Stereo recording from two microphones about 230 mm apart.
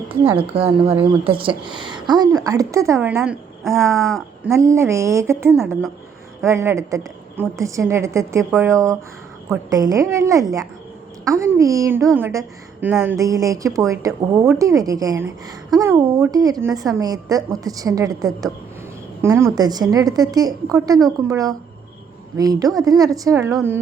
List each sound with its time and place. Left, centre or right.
0.3 s a woman's voice: right; by 4.5 s centre
4.5 s a woman's voice: centre
5.5 s a woman's voice: centre
6.4 s a woman's voice: centre
13.1 s a woman's voice: centre